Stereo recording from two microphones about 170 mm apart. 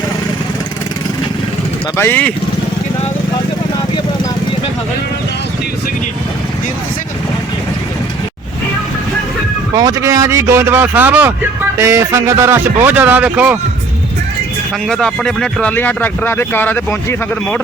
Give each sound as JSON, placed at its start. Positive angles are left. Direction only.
{"t": 2.0, "sound": "speech", "side_deg": 10}
{"t": 9.7, "sound": "a man's voice", "side_deg": -20}
{"t": 14.8, "sound": "speech", "side_deg": 5}